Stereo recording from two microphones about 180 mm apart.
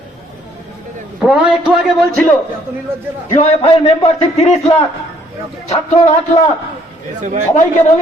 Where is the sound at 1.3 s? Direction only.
Centre (ahead or behind).